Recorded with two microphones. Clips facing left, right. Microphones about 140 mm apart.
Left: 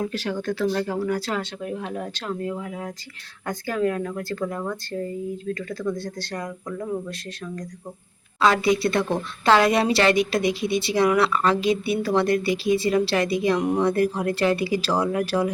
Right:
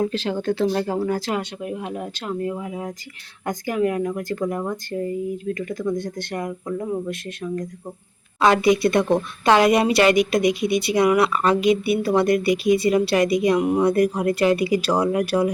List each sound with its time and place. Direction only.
0.0 s speech: 30° right (ahead or behind)
1.4 s speech: 10° right (ahead or behind)